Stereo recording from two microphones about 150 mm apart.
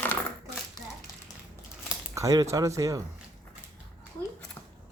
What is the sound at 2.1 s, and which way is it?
Speech, 25° right (ahead or behind).